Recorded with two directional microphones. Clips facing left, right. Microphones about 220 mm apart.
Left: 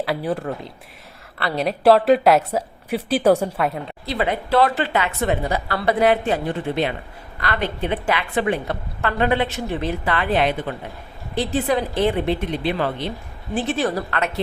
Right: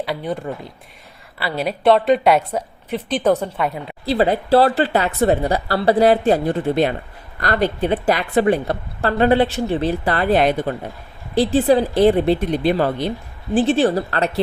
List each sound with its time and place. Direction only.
0.0 s a woman's voice: 5° left (ahead or behind)
4.0 s a woman's voice: 35° right (ahead or behind)
13.5 s a woman's voice: 30° right (ahead or behind)